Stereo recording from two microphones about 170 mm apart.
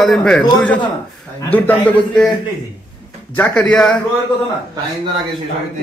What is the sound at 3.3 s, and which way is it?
Speech, 10° left (ahead or behind).